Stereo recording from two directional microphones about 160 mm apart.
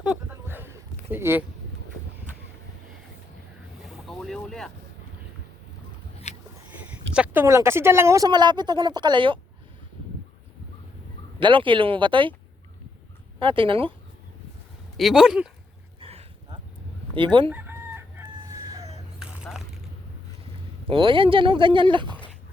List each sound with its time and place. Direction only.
0.0 s a sound: 10° right (ahead or behind)
3.8 s boat: centre (ahead or behind)
7.1 s a sound: 5° right (ahead or behind)
7.4 s speech: 15° right (ahead or behind)
11.3 s speech: 30° right (ahead or behind)
13.4 s speech: 35° right (ahead or behind)
14.9 s speech: centre (ahead or behind)
16.0 s a sound: 35° right (ahead or behind)
17.2 s speech: 30° right (ahead or behind)
17.5 s chicken: 10° right (ahead or behind)
19.2 s a sound: 5° right (ahead or behind)
20.9 s speech: 30° right (ahead or behind)